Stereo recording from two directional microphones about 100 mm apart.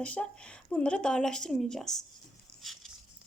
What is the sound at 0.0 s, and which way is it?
Speech, 10° left (ahead or behind).